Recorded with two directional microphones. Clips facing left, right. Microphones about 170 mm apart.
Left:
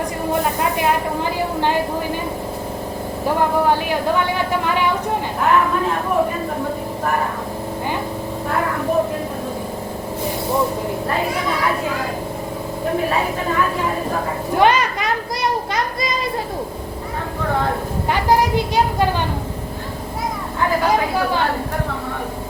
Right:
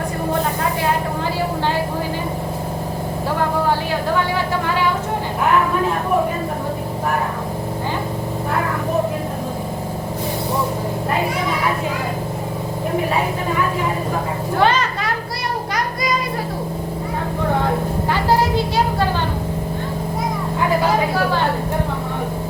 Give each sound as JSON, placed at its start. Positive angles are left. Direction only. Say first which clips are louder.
{"t": 14.6, "sound": "children playing", "louder": "left 2 dB", "side_deg": 15}
{"t": 18.1, "sound": "music", "louder": "left 1 dB", "side_deg": 15}